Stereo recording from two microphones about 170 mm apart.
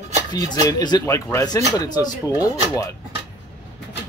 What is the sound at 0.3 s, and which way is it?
Speech, 20° left (ahead or behind).